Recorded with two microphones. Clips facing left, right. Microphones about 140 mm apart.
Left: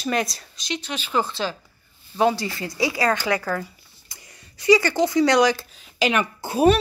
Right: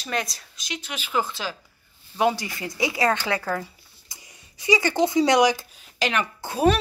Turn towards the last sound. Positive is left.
turn(degrees=10)  # may be behind; listen again after turning